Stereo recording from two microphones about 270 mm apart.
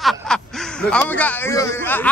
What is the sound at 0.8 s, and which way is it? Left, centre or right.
Speech, centre.